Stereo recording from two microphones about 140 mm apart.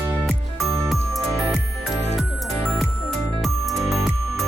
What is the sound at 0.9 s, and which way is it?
Music, centre (ahead or behind).